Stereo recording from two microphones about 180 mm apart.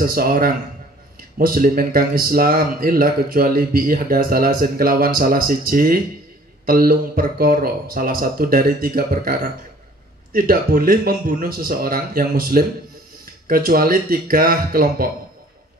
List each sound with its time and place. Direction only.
0.0 s speech: 55° right (ahead or behind)